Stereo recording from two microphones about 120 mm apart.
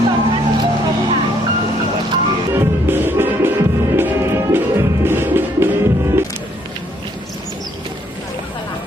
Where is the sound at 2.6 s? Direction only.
20° right (ahead or behind).